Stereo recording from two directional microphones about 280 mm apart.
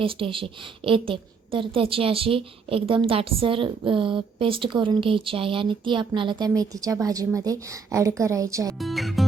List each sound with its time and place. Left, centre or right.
0.0 s a woman's voice: centre
8.8 s speech: centre